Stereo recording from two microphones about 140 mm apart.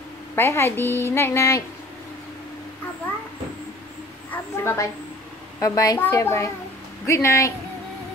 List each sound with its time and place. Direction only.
0.4 s a woman's voice: 20° left (ahead or behind)
4.3 s a woman's voice: 15° left (ahead or behind)